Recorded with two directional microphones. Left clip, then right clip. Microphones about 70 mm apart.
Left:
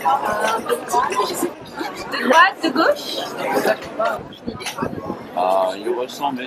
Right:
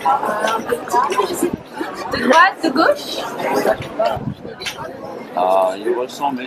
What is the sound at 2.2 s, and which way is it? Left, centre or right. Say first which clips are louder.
Speech: right 1 dB; right.